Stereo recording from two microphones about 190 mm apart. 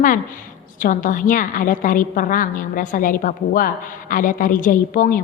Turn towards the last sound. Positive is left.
turn(degrees=45)  # may be behind; listen again after turning